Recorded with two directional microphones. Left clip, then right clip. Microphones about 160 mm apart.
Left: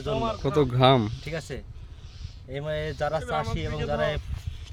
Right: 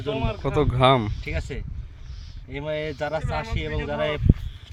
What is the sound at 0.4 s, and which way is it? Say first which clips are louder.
Speech: right 2 dB; 20° left (ahead or behind).